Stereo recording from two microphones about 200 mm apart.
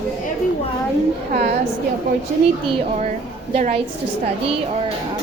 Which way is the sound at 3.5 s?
35° right (ahead or behind).